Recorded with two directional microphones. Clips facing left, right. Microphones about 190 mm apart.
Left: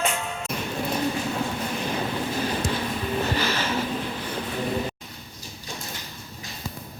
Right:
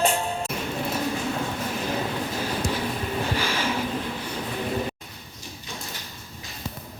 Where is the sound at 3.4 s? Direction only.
10° right (ahead or behind).